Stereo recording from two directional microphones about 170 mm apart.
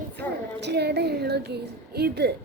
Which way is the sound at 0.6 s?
80° right.